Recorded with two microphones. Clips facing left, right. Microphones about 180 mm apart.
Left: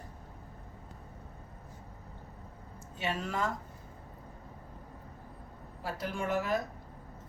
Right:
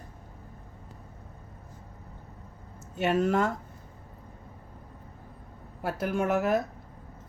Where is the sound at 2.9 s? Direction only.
45° right (ahead or behind).